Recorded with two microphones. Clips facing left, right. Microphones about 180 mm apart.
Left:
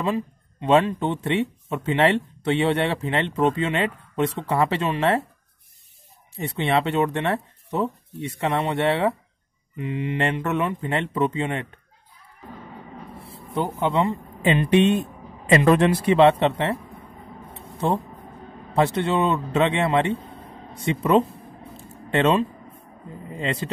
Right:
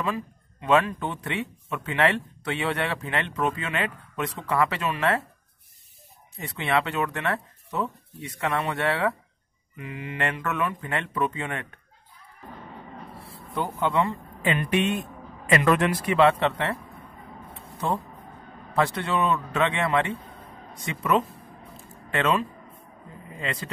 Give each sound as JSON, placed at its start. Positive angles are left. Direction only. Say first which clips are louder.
{"t": 0.0, "sound": "speech", "louder": "left 5 dB", "side_deg": 25}
{"t": 6.3, "sound": "speech", "louder": "left 3 dB", "side_deg": 25}
{"t": 13.6, "sound": "speech", "louder": "left 3 dB", "side_deg": 20}
{"t": 18.8, "sound": "a man's voice", "louder": "left 4 dB", "side_deg": 25}